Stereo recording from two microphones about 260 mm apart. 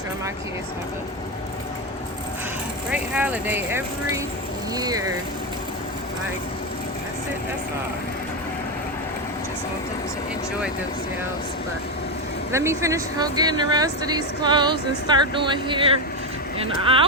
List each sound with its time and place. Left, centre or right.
2.9 s a woman's voice: centre
12.5 s a woman's voice: centre